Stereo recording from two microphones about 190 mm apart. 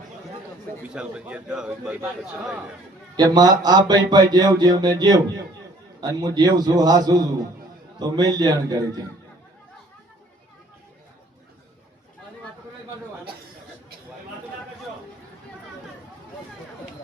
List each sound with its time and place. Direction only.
0.9 s a man's voice: 5° right (ahead or behind)
3.2 s speech: 20° right (ahead or behind)